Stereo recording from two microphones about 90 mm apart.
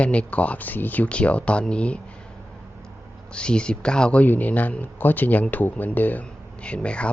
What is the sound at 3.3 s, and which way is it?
Speech, 10° left (ahead or behind).